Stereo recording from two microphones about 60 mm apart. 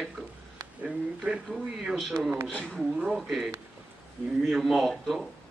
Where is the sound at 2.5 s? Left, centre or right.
Centre.